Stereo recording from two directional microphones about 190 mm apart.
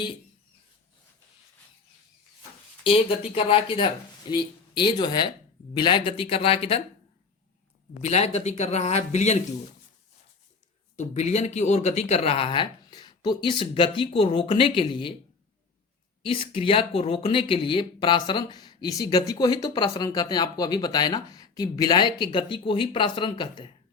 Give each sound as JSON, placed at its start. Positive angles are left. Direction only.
{"t": 2.8, "sound": "speech", "side_deg": 30}
{"t": 8.0, "sound": "speech", "side_deg": 35}
{"t": 10.9, "sound": "speech", "side_deg": 35}
{"t": 16.2, "sound": "speech", "side_deg": 30}